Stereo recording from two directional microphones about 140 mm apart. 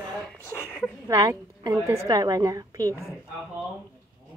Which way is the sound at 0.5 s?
15° left (ahead or behind).